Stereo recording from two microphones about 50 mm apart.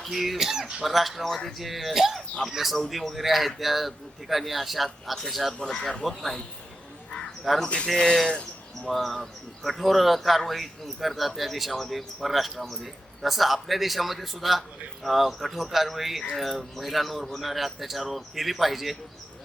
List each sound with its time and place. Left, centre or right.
0.0 s speech: centre
5.6 s speech: centre
6.1 s speech: centre
7.4 s speech: centre
8.0 s speech: centre
8.9 s speech: centre